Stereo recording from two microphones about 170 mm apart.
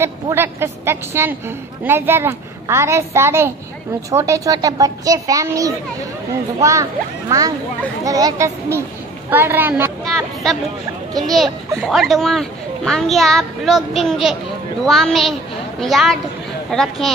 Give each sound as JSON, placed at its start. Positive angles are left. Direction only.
{"t": 0.0, "sound": "a woman's voice", "side_deg": -15}
{"t": 10.0, "sound": "a woman's voice", "side_deg": 0}